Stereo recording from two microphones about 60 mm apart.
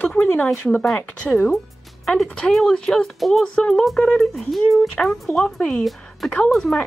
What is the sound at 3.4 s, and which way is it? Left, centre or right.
Speech, centre.